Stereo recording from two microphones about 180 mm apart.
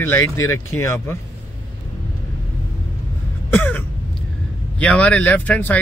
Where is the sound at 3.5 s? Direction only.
10° left (ahead or behind).